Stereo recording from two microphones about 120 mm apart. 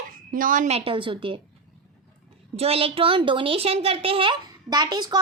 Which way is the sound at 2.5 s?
55° right (ahead or behind).